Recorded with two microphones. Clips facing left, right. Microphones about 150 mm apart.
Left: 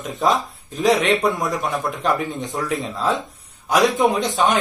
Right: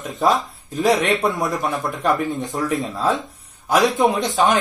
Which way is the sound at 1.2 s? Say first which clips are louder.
Even; centre (ahead or behind).